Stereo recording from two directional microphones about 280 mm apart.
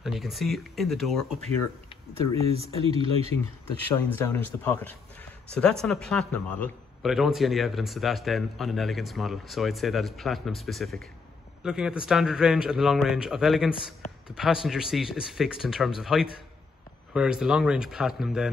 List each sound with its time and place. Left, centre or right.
0.0 s a man's voice: centre
2.6 s speech: centre
3.9 s a man's voice: centre